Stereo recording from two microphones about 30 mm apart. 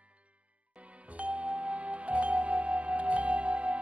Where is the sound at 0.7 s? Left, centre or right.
Right.